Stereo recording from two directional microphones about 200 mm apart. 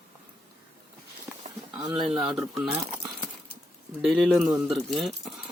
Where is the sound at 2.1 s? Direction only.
5° right (ahead or behind).